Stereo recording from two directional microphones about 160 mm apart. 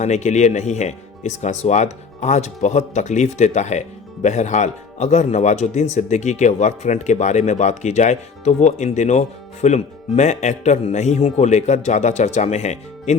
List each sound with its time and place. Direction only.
0.0 s speech: 45° left (ahead or behind)